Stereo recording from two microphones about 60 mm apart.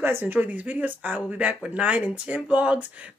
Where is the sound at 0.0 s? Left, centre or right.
Right.